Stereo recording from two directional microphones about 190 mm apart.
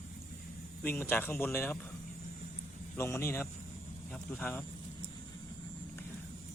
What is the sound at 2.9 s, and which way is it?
Speech, 15° left (ahead or behind).